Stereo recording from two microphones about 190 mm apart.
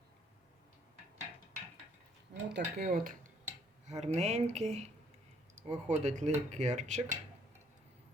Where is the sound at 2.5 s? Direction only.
50° right (ahead or behind); by 4.9 s 35° right (ahead or behind).